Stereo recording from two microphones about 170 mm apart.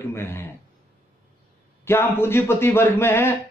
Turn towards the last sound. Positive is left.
turn(degrees=15)  # may be behind; listen again after turning